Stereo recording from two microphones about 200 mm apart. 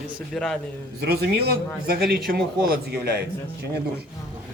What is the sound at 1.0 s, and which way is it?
A man's voice, 55° right (ahead or behind).